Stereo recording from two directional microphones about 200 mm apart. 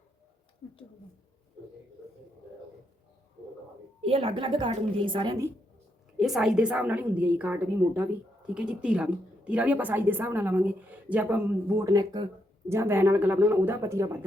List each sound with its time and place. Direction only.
0.6 s a sound: 20° left (ahead or behind)
4.0 s a woman's voice: 30° right (ahead or behind)
6.1 s a woman's voice: centre (ahead or behind)